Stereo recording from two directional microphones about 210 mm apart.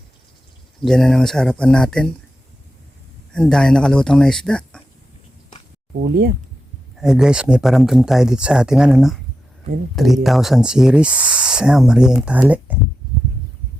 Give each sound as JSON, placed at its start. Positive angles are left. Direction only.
{"t": 0.8, "sound": "speech", "side_deg": 0}
{"t": 3.3, "sound": "speech", "side_deg": 5}
{"t": 6.0, "sound": "speech", "side_deg": -45}
{"t": 6.9, "sound": "speech", "side_deg": -5}